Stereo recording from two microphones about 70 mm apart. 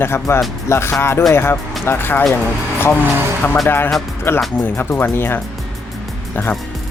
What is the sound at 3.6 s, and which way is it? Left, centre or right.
Speech, left.